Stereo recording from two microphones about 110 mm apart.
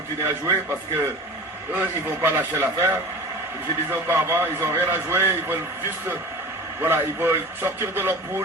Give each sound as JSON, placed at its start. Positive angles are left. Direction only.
{"t": 0.2, "sound": "a man's voice", "side_deg": -25}
{"t": 6.8, "sound": "a man's voice", "side_deg": -20}